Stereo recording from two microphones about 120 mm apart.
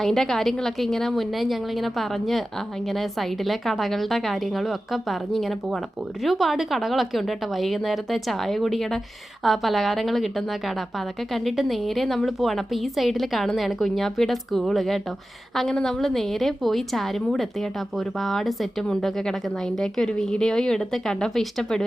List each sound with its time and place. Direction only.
0.0 s a woman's voice: centre (ahead or behind)